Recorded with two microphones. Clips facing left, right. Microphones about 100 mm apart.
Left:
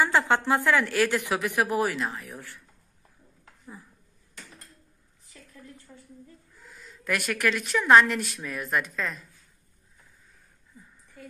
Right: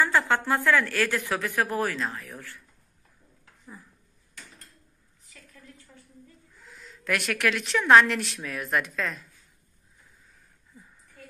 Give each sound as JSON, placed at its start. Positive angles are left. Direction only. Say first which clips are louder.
{"t": 0.0, "sound": "a woman's voice", "louder": "left 1 dB", "side_deg": 20}
{"t": 6.5, "sound": "a woman's voice", "louder": "even", "side_deg": 0}